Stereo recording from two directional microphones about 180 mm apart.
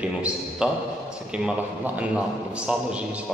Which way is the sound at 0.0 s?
5° right (ahead or behind).